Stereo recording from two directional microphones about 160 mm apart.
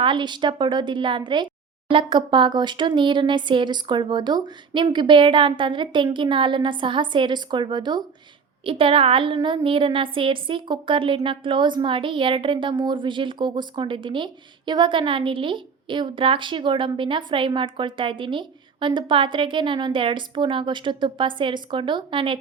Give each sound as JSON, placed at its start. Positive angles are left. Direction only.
{"t": 0.0, "sound": "a woman's voice", "side_deg": -30}